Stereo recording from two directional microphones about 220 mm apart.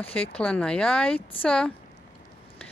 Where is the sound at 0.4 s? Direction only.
5° left (ahead or behind).